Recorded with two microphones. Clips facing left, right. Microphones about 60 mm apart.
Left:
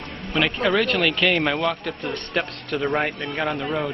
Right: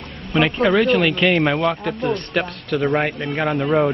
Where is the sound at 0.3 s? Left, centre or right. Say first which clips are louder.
Right 4 dB; centre.